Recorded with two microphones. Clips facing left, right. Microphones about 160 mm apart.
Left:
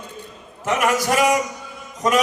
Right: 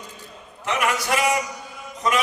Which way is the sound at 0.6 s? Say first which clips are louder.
Left 4 dB; 45° left (ahead or behind).